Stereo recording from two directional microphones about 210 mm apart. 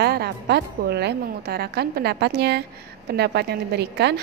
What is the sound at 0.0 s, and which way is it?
A woman's voice, 50° right (ahead or behind).